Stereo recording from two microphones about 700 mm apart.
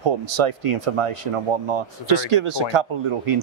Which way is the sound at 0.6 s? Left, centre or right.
Right.